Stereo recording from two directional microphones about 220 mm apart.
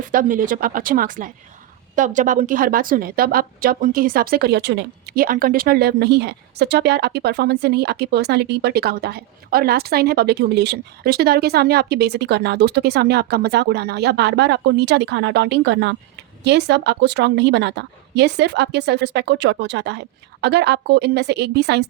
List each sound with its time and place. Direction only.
0.0 s a woman's voice: 40° right (ahead or behind)